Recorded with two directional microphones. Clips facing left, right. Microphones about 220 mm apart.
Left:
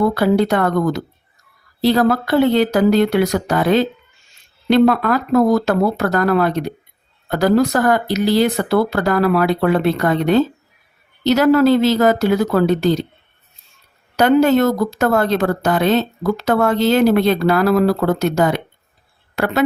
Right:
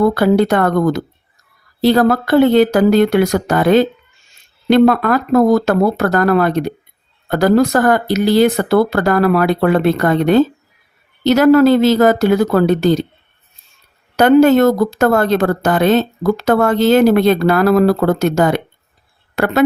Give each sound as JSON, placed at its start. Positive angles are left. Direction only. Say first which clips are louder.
{"t": 0.1, "sound": "a woman's voice", "louder": "right 3 dB", "side_deg": -50}
{"t": 14.2, "sound": "a woman's voice", "louder": "right 4 dB", "side_deg": -50}